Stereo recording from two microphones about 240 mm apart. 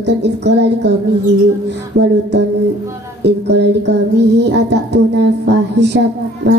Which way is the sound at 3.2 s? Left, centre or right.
Right.